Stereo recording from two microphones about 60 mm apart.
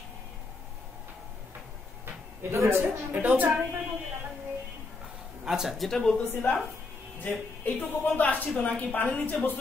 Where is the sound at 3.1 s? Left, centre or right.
Right.